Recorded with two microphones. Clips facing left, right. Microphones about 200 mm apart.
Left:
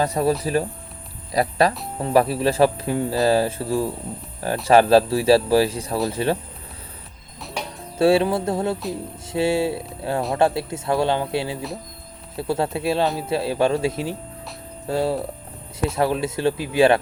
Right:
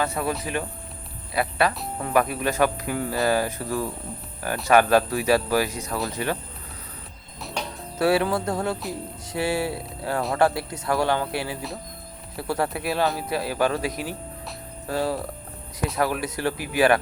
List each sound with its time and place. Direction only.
0.0 s speech: 35° left (ahead or behind)
7.9 s speech: 25° left (ahead or behind)